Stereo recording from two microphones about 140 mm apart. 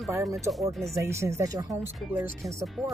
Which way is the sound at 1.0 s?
20° right (ahead or behind).